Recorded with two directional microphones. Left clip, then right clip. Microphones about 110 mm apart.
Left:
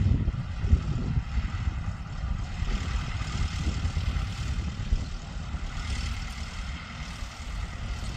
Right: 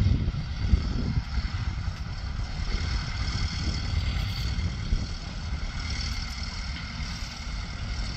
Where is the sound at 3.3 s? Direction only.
30° left (ahead or behind).